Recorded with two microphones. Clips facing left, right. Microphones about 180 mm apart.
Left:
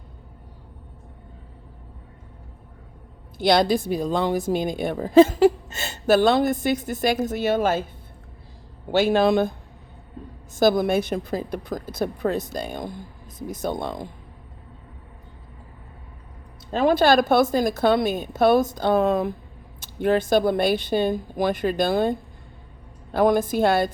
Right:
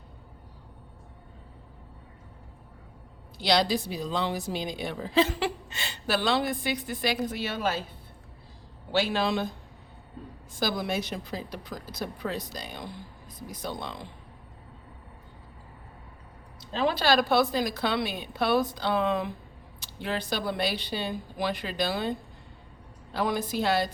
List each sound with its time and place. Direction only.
3.3 s a woman's voice: 50° left (ahead or behind)
8.9 s a woman's voice: 50° left (ahead or behind)
10.6 s a woman's voice: 50° left (ahead or behind)
16.7 s a woman's voice: 50° left (ahead or behind)
23.1 s a woman's voice: 50° left (ahead or behind)